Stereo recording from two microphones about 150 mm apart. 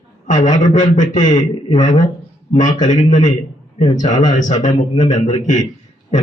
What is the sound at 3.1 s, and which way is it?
A man's voice, 55° left (ahead or behind).